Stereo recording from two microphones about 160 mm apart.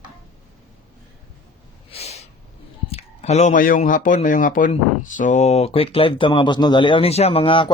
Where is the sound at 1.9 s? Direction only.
40° left (ahead or behind).